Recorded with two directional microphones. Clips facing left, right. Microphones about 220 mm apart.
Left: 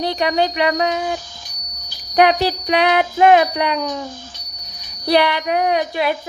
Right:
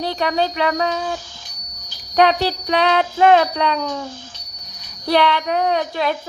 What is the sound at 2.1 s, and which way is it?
Speech, 15° left (ahead or behind).